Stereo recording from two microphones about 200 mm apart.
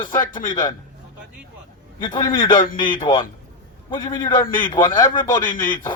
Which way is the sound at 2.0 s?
20° left (ahead or behind).